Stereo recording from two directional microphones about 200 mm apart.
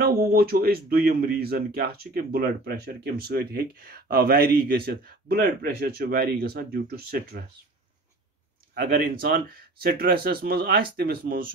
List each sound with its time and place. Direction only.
0.0 s speech: 50° right (ahead or behind)
8.7 s speech: 50° right (ahead or behind)